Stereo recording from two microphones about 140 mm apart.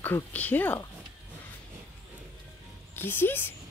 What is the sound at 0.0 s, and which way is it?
Speech, 10° left (ahead or behind).